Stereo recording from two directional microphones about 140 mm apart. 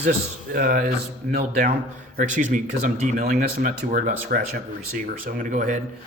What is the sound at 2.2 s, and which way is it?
Speech, 65° right (ahead or behind).